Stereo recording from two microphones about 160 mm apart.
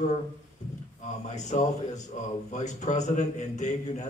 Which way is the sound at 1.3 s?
45° left (ahead or behind).